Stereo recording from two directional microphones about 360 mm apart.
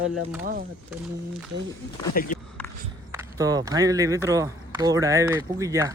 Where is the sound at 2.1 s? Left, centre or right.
Left.